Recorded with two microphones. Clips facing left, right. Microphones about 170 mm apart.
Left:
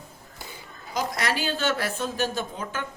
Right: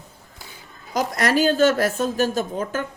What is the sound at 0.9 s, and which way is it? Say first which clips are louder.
A woman's voice: right 7 dB; 45° right (ahead or behind).